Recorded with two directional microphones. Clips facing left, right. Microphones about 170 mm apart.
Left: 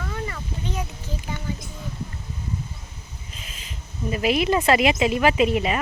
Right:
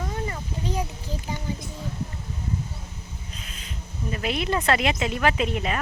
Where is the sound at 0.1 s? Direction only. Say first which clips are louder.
Even; 30° right (ahead or behind).